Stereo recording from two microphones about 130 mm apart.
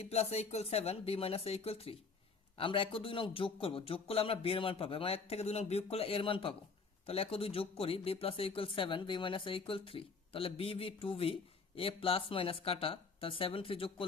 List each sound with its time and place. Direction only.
0.0 s speech: 55° left (ahead or behind)